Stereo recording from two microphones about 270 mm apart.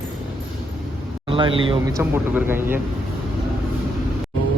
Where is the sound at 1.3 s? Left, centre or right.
Centre.